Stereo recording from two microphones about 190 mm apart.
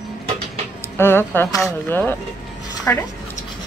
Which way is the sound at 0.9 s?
10° left (ahead or behind).